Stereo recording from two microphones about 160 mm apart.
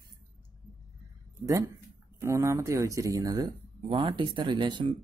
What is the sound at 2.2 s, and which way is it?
Speech, 20° right (ahead or behind).